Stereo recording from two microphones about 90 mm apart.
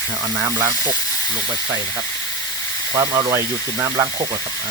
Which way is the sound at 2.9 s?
35° right (ahead or behind).